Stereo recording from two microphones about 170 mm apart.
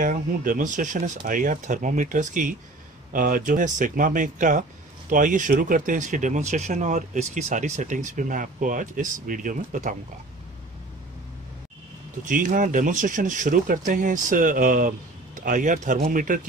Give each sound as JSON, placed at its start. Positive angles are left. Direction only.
{"t": 0.0, "sound": "speech", "side_deg": -55}
{"t": 12.3, "sound": "speech", "side_deg": -50}